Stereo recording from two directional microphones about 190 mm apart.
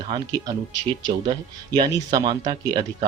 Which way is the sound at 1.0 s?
20° right (ahead or behind).